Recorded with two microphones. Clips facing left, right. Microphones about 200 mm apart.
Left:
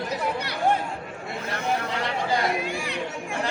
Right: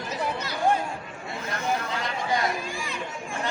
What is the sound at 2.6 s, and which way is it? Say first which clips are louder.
Chatter: left 4 dB; 65° left (ahead or behind).